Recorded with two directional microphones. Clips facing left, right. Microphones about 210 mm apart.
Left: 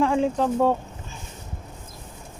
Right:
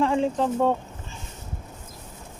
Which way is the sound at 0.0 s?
5° left (ahead or behind).